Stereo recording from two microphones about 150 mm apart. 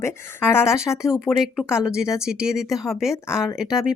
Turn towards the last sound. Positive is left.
turn(degrees=-5)  # may be behind; listen again after turning